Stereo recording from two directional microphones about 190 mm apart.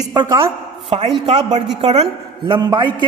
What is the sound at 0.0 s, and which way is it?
A man's voice, 20° right (ahead or behind).